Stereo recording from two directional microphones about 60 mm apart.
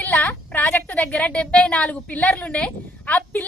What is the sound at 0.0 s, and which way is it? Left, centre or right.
A woman's voice, left.